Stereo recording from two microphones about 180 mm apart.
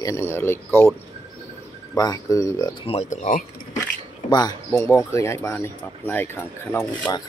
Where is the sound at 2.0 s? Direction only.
20° left (ahead or behind).